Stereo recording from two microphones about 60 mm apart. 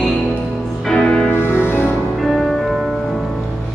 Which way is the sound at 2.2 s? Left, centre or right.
Centre.